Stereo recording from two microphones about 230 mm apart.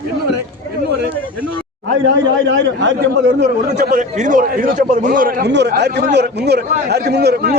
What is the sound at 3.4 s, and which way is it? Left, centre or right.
A man's voice, right.